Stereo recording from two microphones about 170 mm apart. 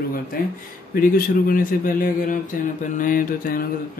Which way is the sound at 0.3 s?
60° left (ahead or behind).